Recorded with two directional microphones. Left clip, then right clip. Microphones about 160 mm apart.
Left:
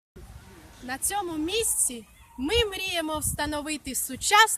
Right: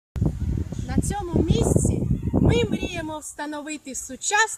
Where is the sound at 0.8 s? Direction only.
20° left (ahead or behind).